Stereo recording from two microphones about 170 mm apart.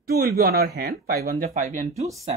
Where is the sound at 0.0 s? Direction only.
60° right (ahead or behind).